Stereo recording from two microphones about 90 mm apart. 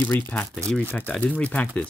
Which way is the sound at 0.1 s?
20° left (ahead or behind).